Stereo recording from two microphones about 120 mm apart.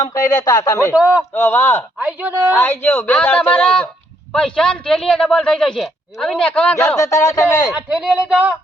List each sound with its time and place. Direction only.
0.0 s speech: 30° left (ahead or behind)
0.9 s speech: 10° right (ahead or behind)
1.3 s speech: 20° left (ahead or behind)
2.0 s speech: 10° right (ahead or behind)
2.6 s a man's voice: 20° left (ahead or behind)
6.8 s speech: 25° left (ahead or behind)
7.7 s speech: 5° right (ahead or behind)